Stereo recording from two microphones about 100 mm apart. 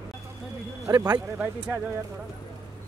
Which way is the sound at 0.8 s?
35° right (ahead or behind).